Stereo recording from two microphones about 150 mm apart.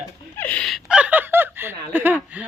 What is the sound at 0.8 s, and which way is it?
Fowl, 10° right (ahead or behind).